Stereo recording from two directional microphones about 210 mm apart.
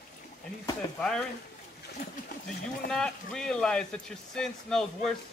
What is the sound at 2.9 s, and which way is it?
Speech, 5° left (ahead or behind).